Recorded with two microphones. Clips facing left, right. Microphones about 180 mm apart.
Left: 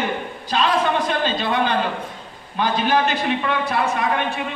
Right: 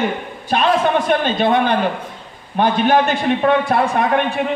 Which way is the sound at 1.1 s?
55° right (ahead or behind).